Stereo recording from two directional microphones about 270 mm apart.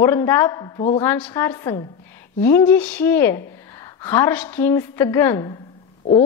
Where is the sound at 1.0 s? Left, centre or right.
Centre.